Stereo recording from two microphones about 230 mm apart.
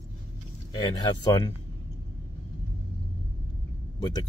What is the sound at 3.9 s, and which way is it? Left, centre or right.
Speech, centre.